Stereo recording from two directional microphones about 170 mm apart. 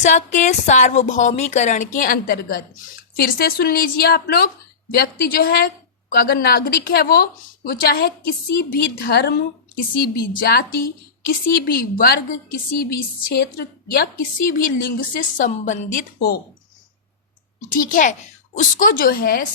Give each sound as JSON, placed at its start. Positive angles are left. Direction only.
{"t": 0.0, "sound": "a woman's voice", "side_deg": 45}
{"t": 13.3, "sound": "a woman's voice", "side_deg": 65}
{"t": 17.7, "sound": "a woman's voice", "side_deg": 55}